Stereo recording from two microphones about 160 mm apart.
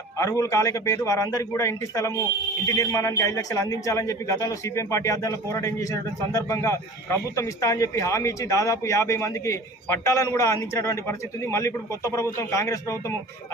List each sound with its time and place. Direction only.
0.2 s a man's voice: 20° left (ahead or behind)